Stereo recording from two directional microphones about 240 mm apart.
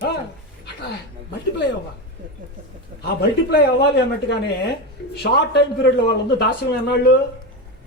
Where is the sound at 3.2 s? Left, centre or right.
Left.